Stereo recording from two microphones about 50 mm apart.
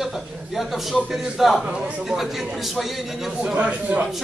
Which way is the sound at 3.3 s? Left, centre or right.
Right.